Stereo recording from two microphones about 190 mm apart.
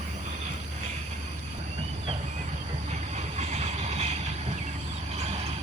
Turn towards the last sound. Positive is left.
turn(degrees=-35)  # may be behind; listen again after turning